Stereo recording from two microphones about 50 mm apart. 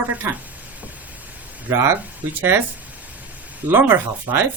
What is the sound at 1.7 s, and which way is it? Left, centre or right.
Speech, right.